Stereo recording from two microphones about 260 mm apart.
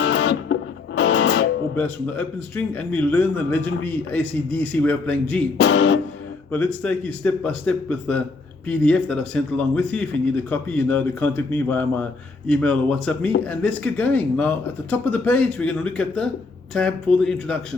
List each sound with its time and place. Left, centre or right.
0.0 s music: left
1.7 s speech: centre
5.5 s music: left
6.5 s speech: centre